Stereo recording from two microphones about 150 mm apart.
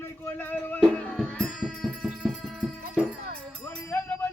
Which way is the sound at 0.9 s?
10° left (ahead or behind).